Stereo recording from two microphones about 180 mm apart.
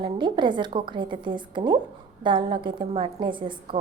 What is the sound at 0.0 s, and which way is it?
A woman's voice, 25° right (ahead or behind).